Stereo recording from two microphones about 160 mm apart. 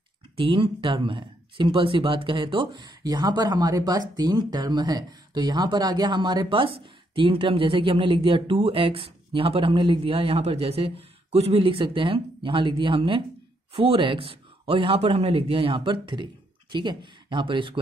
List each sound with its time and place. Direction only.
0.4 s speech: 30° right (ahead or behind)